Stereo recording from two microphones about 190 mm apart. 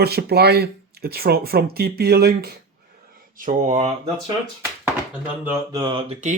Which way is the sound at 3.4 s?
40° right (ahead or behind).